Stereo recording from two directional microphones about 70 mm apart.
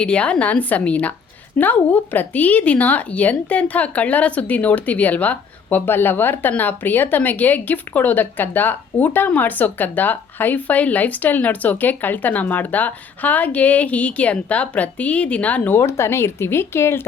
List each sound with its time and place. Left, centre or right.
0.0 s speech: centre
15.8 s speech: left